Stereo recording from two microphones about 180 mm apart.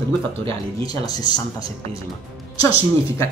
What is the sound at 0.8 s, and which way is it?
Speech, 20° left (ahead or behind).